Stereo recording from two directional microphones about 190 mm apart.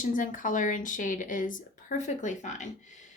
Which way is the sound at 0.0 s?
45° left (ahead or behind).